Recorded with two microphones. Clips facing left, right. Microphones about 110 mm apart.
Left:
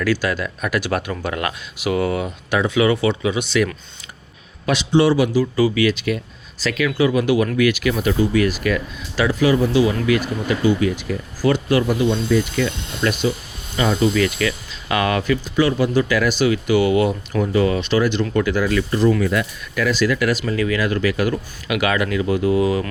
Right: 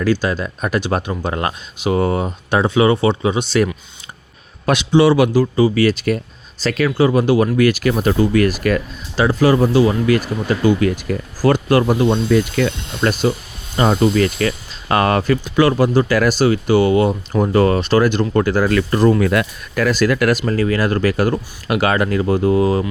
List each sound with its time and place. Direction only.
0.0 s speech: 25° right (ahead or behind)
4.6 s a man's voice: 55° right (ahead or behind)
5.7 s speech: 40° right (ahead or behind)
9.1 s speech: 30° right (ahead or behind)
17.4 s speech: 50° right (ahead or behind)
18.7 s speech: 60° right (ahead or behind)
19.7 s speech: 45° right (ahead or behind)